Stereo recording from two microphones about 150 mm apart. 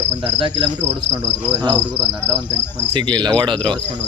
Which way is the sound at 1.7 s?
10° left (ahead or behind).